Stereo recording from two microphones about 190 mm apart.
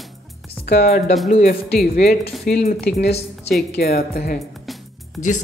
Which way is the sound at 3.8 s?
55° left (ahead or behind).